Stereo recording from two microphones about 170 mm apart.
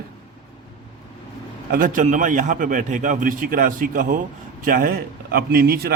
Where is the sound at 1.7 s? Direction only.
55° right (ahead or behind).